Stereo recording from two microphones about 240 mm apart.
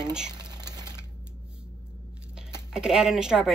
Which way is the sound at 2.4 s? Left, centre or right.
Centre.